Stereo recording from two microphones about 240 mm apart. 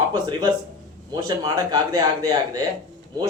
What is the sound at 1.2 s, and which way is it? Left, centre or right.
A man's voice, centre.